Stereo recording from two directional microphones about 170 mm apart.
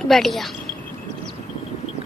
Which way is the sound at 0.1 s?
Centre (ahead or behind).